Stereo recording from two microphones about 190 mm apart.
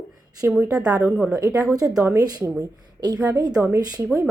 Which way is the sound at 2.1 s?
20° right (ahead or behind).